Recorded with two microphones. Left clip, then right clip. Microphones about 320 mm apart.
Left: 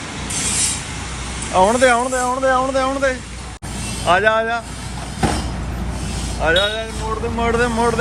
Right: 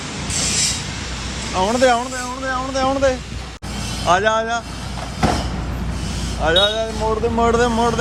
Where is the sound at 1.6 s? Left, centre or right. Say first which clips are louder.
Left 3 dB; centre.